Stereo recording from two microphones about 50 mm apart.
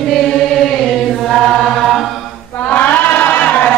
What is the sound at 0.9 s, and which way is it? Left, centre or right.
Chant, centre.